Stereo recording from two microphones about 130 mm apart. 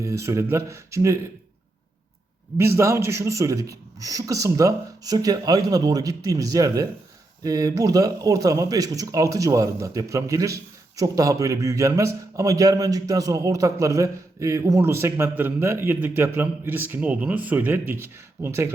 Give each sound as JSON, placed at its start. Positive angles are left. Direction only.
{"t": 0.0, "sound": "a man's voice", "side_deg": -20}
{"t": 2.6, "sound": "a man's voice", "side_deg": -20}